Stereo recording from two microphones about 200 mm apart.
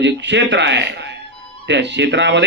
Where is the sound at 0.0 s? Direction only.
60° right (ahead or behind).